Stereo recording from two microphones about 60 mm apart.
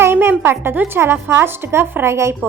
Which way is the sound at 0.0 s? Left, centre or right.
Right.